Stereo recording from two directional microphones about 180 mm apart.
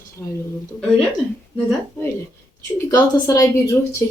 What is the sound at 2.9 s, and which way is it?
Speech, 20° left (ahead or behind).